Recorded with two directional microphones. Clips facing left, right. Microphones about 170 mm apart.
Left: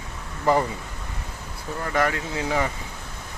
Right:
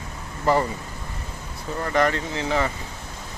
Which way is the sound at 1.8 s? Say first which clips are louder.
Right 2 dB; 5° left (ahead or behind).